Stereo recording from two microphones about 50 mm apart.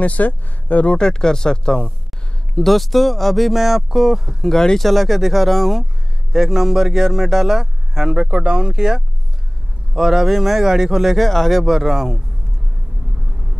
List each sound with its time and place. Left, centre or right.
0.0 s speech: left
0.9 s speech: centre
2.6 s speech: centre
4.5 s speech: centre
11.2 s speech: centre
11.6 s speech: centre